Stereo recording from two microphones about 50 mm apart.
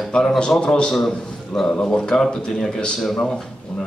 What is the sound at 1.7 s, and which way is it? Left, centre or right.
A man's voice, centre.